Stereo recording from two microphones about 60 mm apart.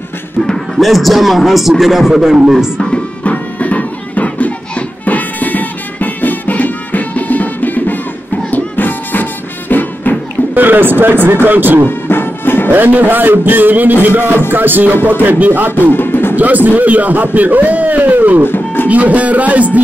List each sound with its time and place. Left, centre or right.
0.7 s a man's voice: centre
2.8 s music: centre
10.5 s a man's voice: right
12.1 s music: left
12.7 s a man's voice: right
15.9 s music: left
16.3 s a man's voice: right
18.4 s music: left
18.9 s a man's voice: right